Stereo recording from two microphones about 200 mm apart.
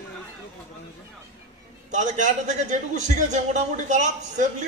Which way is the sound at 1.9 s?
35° right (ahead or behind).